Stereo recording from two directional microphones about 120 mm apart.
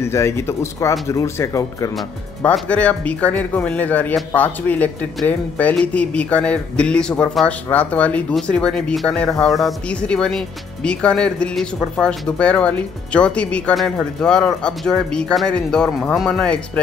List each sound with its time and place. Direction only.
0.0 s speech: 20° left (ahead or behind)
2.7 s a man's voice: 10° left (ahead or behind)